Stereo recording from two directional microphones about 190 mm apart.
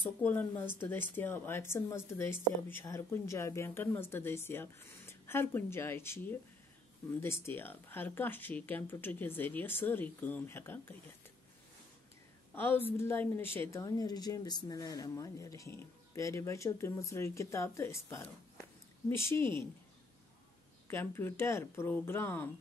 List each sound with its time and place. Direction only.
0.2 s speech: 10° left (ahead or behind)
12.5 s a woman's voice: 10° left (ahead or behind)
20.9 s speech: 10° left (ahead or behind)